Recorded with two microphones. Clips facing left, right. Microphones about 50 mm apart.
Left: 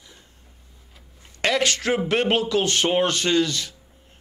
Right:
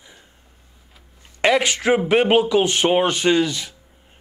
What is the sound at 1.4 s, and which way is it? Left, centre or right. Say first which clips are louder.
Speech: right 4 dB; centre.